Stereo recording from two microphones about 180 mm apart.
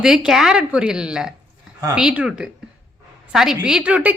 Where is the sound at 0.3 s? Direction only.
5° right (ahead or behind).